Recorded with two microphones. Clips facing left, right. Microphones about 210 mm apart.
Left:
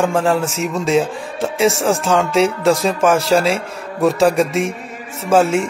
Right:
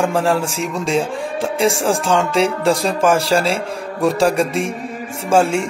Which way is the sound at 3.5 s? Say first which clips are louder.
Left 1 dB; 30° right (ahead or behind).